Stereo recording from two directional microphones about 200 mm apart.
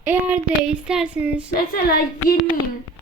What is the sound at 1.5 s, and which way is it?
Speech, 50° left (ahead or behind).